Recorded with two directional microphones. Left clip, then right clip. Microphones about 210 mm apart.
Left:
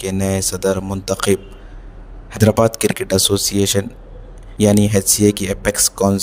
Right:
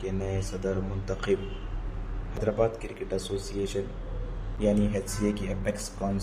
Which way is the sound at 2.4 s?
55° left (ahead or behind).